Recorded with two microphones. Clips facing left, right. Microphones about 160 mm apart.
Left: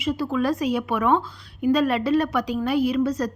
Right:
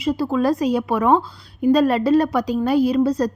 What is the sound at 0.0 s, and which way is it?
A woman's voice, 35° right (ahead or behind).